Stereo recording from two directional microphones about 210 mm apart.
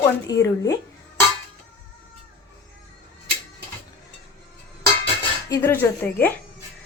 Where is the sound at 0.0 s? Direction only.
15° left (ahead or behind).